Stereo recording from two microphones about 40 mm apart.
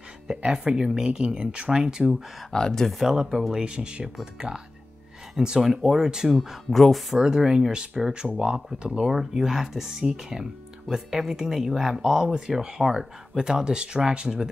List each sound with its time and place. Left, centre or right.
0.4 s speech: right
2.5 s speech: centre
2.9 s speech: centre
3.6 s speech: right
6.3 s speech: centre
7.2 s speech: centre
7.7 s speech: right
9.1 s speech: centre